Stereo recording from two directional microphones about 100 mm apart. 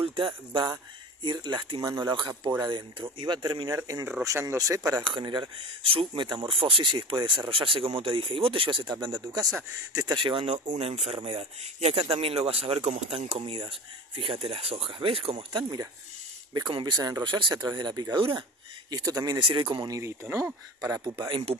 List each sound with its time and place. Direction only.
0.0 s a sound: 65° right (ahead or behind)
1.2 s speech: 45° right (ahead or behind)
3.6 s speech: 35° right (ahead or behind)
5.0 s speech: 50° right (ahead or behind)
5.8 s speech: 65° right (ahead or behind)
9.1 s speech: 40° right (ahead or behind)
10.1 s speech: 60° right (ahead or behind); by 12.0 s 85° right
12.1 s speech: 70° right (ahead or behind)
15.5 s speech: 45° right (ahead or behind)
20.2 s speech: 20° right (ahead or behind)
21.0 s speech: 55° right (ahead or behind)